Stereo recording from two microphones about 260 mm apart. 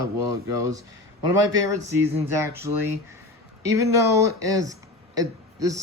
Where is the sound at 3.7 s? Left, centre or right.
Centre.